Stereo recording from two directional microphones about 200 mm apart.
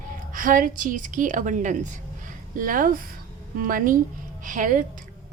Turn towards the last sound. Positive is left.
turn(degrees=-40)  # may be behind; listen again after turning